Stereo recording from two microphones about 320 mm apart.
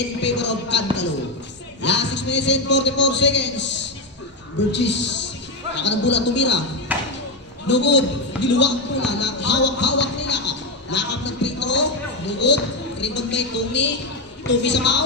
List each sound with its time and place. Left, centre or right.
0.2 s a man's voice: left
6.9 s a sound: centre
7.6 s a man's voice: left